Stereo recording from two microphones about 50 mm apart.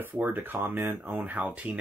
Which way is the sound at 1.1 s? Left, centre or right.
Right.